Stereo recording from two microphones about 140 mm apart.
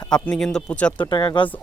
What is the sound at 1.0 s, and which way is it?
Speech, 30° left (ahead or behind).